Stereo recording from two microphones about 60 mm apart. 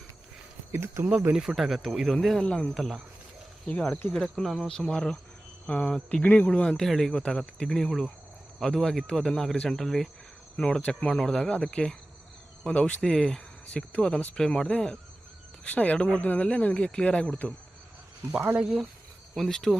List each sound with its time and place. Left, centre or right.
0.7 s speech: right
1.4 s speech: centre
2.1 s speech: centre
4.1 s speech: centre
6.2 s speech: left
6.5 s speech: centre
18.5 s speech: centre
19.4 s speech: centre